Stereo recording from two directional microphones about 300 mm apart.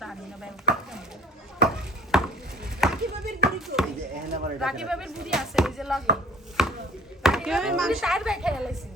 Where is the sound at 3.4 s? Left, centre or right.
Centre.